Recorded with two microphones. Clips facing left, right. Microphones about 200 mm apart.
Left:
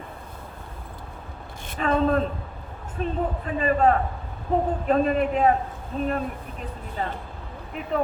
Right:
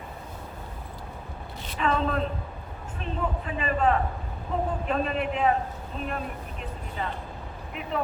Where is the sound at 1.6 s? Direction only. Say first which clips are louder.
Left 4 dB; 50° left (ahead or behind).